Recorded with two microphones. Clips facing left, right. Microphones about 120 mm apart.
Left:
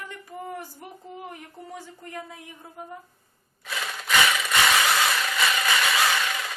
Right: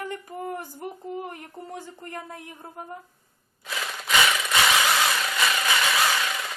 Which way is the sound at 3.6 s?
Centre (ahead or behind).